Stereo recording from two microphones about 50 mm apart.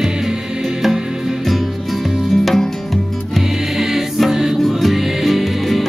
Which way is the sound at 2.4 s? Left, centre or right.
Centre.